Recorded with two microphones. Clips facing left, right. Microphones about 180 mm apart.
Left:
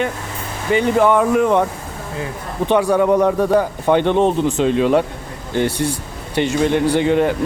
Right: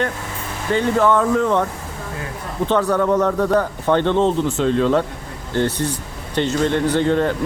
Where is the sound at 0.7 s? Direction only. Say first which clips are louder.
Left 2 dB; 15° left (ahead or behind).